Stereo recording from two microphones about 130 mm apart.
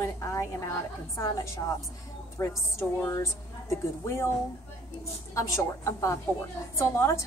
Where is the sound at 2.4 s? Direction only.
20° left (ahead or behind).